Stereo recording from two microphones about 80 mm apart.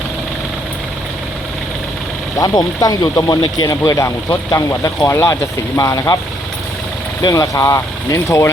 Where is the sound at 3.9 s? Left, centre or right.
Left.